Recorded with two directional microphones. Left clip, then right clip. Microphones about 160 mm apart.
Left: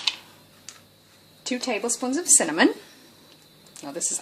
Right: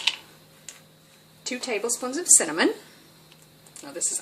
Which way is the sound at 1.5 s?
40° left (ahead or behind).